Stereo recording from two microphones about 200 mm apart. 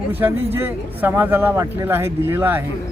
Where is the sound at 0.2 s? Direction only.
10° right (ahead or behind).